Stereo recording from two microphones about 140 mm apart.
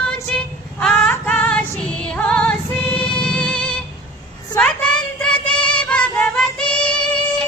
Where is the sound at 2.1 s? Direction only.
10° left (ahead or behind).